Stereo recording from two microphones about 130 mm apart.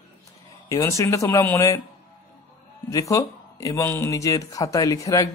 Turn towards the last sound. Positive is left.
turn(degrees=25)  # may be behind; listen again after turning